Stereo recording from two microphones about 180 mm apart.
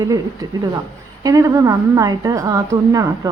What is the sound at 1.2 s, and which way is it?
Speech, 20° right (ahead or behind).